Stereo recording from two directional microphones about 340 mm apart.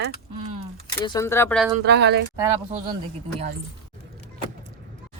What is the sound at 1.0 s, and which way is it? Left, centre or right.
Speech, centre.